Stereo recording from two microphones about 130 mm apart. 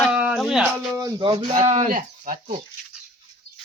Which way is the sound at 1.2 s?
40° right (ahead or behind).